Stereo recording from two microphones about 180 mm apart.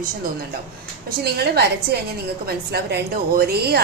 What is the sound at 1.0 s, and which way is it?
A woman's voice, 60° right (ahead or behind).